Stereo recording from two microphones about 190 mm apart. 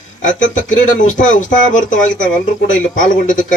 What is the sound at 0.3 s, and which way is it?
A man's voice, 40° left (ahead or behind).